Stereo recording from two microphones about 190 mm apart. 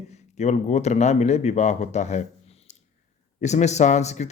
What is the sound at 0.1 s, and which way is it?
Speech, 35° left (ahead or behind).